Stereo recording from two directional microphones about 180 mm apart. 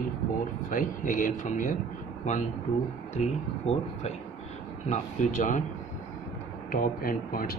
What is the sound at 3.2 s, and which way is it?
Speech, 35° left (ahead or behind).